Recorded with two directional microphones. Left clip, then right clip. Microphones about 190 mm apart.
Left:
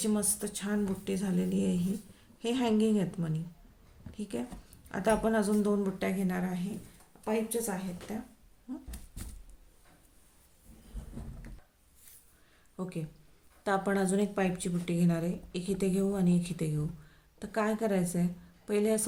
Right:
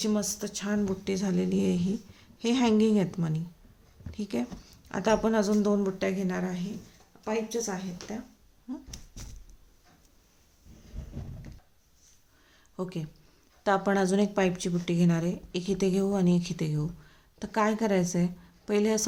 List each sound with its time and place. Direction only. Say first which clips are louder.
0.0 s speech: right 3 dB; 20° right (ahead or behind)
12.7 s a woman's voice: right 4 dB; 30° right (ahead or behind)